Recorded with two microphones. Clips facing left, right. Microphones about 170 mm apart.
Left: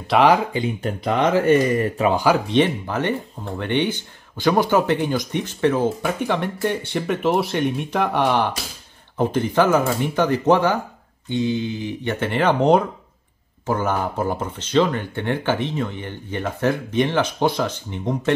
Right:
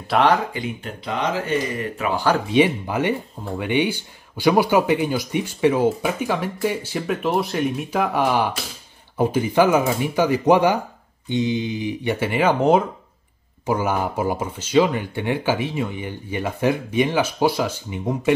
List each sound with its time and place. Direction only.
0.0 s speech: 5° left (ahead or behind)
1.1 s speech: 50° left (ahead or behind)
2.4 s speech: 10° right (ahead or behind)